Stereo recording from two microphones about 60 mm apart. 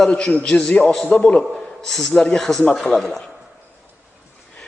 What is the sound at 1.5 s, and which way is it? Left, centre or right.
A man's voice, centre.